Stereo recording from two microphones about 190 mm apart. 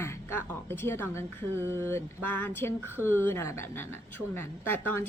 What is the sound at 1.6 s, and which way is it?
Speech, 10° right (ahead or behind).